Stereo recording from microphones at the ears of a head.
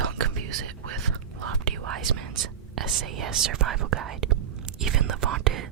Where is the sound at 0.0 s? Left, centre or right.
Right.